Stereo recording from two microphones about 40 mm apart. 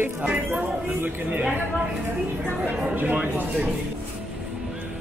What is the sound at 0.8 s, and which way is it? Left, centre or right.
Speech, right.